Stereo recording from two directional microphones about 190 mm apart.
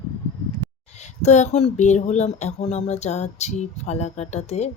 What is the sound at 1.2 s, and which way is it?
Speech, 35° left (ahead or behind).